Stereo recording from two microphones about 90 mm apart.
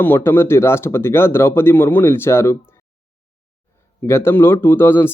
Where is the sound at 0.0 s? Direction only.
25° left (ahead or behind).